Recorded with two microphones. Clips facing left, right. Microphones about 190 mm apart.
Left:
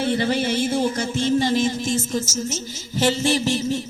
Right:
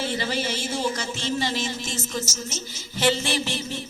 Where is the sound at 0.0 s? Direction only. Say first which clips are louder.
Left 6 dB; 55° left (ahead or behind).